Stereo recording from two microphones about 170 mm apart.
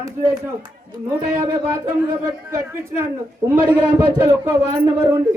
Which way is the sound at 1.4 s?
20° right (ahead or behind).